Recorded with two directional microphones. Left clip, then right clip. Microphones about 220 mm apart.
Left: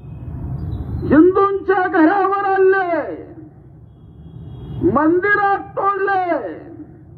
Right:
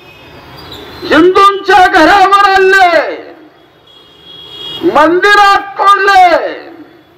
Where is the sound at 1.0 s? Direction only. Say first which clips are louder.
Right 7 dB; 50° right (ahead or behind).